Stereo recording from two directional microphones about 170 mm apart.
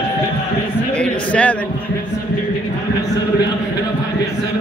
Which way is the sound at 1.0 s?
10° left (ahead or behind).